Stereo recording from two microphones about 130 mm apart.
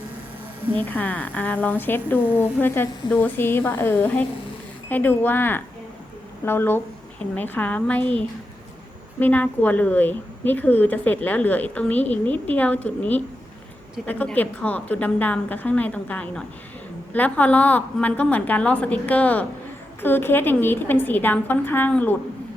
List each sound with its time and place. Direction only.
0.8 s a woman's voice: 10° left (ahead or behind)